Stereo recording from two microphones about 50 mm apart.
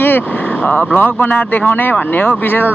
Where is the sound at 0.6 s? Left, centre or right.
Left.